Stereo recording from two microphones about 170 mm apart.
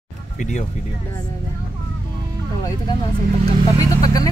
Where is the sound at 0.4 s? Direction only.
45° left (ahead or behind).